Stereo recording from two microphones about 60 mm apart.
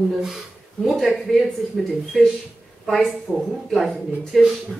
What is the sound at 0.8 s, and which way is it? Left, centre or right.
Speech, centre.